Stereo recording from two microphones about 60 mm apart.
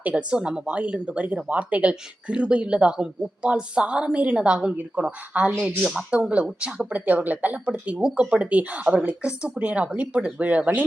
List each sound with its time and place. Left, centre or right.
0.1 s speech: centre